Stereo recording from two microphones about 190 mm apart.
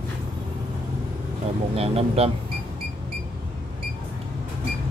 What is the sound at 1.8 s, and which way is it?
Speech, 30° right (ahead or behind).